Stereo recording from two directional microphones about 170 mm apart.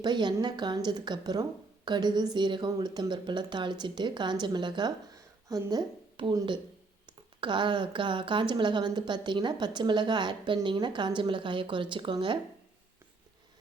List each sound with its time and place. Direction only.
0.0 s a woman's voice: 25° right (ahead or behind)